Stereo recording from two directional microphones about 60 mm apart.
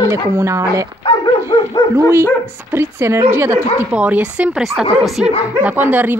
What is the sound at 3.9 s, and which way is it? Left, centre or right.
Speech, right.